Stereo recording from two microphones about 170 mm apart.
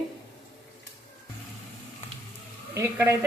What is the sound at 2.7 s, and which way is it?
Speech, 15° right (ahead or behind).